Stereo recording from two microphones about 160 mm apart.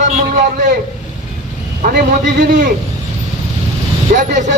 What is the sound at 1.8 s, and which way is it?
Speech, 75° right (ahead or behind).